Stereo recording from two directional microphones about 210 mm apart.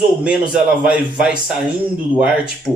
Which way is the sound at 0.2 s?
5° right (ahead or behind).